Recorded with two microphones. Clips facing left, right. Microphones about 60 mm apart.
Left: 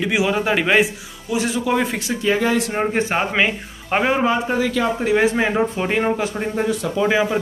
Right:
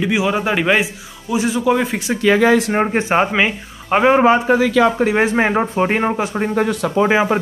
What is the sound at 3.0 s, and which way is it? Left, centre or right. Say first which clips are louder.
Speech: right 5 dB; right.